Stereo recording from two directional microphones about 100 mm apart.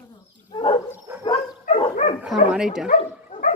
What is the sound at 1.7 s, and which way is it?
Dog, 90° left.